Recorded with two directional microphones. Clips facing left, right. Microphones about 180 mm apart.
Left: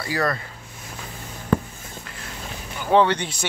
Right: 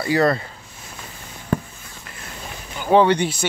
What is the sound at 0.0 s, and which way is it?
Speech, 25° right (ahead or behind).